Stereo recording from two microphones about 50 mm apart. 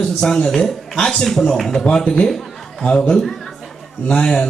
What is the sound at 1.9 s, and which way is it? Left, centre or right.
A man's voice, centre.